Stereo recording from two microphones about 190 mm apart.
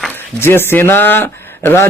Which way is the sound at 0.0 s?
10° left (ahead or behind).